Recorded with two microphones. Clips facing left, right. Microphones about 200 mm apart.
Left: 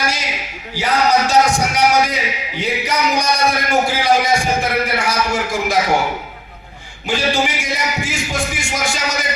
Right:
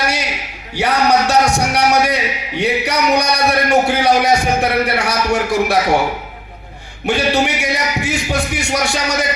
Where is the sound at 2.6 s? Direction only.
65° right (ahead or behind).